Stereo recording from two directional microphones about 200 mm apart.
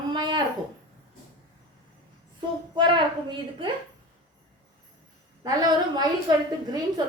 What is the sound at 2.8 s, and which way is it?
Speech, 25° right (ahead or behind).